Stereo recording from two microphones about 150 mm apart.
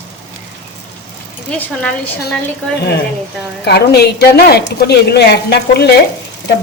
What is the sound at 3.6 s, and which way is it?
A woman's voice, 90° left.